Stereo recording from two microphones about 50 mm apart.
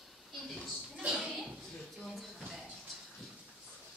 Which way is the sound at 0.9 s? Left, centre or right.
Centre.